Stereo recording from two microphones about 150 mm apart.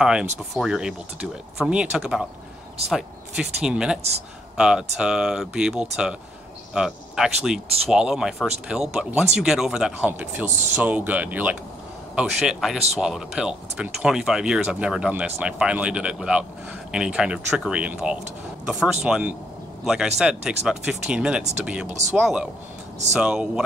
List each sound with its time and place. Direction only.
0.0 s speech: 5° right (ahead or behind)
21.8 s speech: 50° right (ahead or behind)
22.1 s speech: 5° right (ahead or behind)